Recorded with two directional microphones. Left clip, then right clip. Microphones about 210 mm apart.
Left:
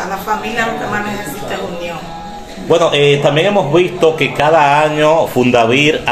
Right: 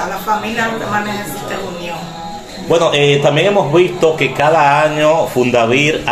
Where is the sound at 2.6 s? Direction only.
10° left (ahead or behind).